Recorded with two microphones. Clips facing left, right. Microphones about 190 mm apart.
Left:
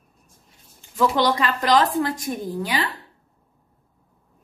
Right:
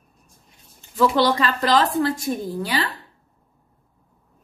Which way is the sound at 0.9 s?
15° left (ahead or behind).